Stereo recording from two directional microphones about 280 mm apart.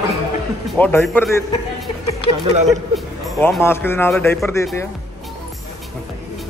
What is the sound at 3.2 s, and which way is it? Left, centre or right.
Speech, centre.